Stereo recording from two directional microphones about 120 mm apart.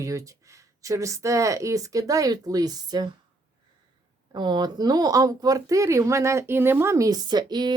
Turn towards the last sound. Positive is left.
turn(degrees=-35)  # may be behind; listen again after turning